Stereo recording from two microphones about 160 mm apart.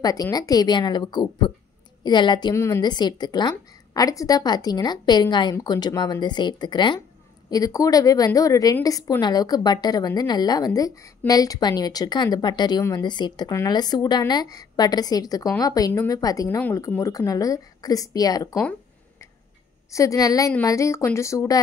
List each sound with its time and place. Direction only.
0.0 s a woman's voice: 25° left (ahead or behind)
2.5 s a woman's voice: 15° left (ahead or behind)
16.4 s a woman's voice: 10° left (ahead or behind)
19.9 s a woman's voice: 20° left (ahead or behind)